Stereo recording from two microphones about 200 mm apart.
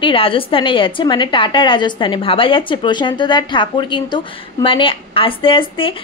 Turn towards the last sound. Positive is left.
turn(degrees=25)  # may be behind; listen again after turning